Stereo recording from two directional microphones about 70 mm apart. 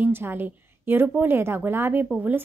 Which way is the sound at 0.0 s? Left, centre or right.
Right.